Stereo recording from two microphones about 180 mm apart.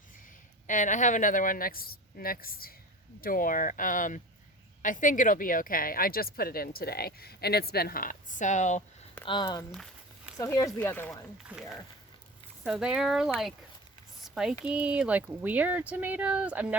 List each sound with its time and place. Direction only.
0.7 s speech: 45° left (ahead or behind)
9.2 s speech: 25° left (ahead or behind)
9.7 s a sound: centre (ahead or behind)
10.3 s speech: 20° left (ahead or behind)
12.6 s speech: 5° right (ahead or behind)
14.3 s a sound: 5° right (ahead or behind)
14.6 s speech: 5° right (ahead or behind)